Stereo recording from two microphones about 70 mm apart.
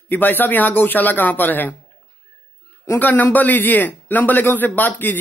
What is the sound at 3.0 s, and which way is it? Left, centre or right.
Speech, left.